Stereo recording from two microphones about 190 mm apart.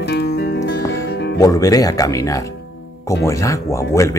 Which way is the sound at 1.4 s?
20° left (ahead or behind).